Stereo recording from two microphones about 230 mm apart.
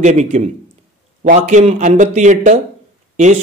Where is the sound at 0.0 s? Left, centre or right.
Right.